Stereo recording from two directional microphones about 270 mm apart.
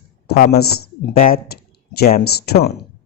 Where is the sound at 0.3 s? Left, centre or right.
Left.